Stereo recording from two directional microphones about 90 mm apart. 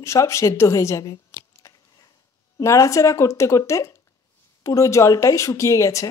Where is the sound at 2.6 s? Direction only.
35° left (ahead or behind).